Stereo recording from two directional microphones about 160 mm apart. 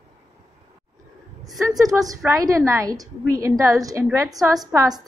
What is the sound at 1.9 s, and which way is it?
A woman's voice, 20° right (ahead or behind).